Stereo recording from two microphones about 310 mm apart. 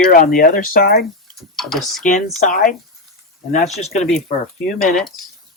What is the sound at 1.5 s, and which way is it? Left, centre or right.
Speech, centre.